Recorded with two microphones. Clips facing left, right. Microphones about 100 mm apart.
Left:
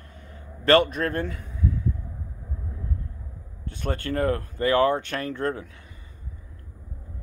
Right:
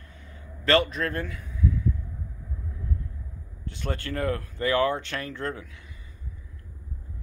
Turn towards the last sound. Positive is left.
turn(degrees=40)  # may be behind; listen again after turning